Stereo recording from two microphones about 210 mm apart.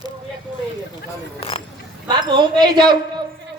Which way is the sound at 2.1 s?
20° right (ahead or behind).